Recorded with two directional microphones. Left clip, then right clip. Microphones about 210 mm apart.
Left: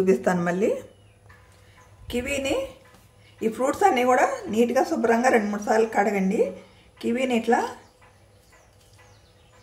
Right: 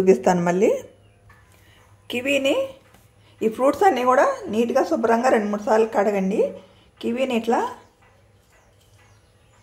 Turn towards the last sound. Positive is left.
turn(degrees=-10)  # may be behind; listen again after turning